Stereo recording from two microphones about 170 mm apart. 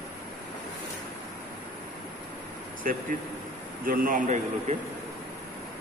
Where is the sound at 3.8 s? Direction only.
55° right (ahead or behind).